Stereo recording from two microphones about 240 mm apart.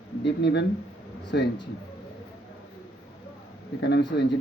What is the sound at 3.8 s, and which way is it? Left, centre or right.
Speech, left.